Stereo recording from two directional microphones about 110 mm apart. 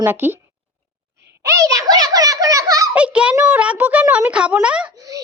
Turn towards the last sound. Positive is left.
turn(degrees=-30)  # may be behind; listen again after turning